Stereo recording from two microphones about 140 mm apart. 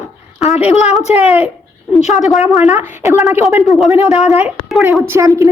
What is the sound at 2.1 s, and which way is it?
Speech, centre (ahead or behind).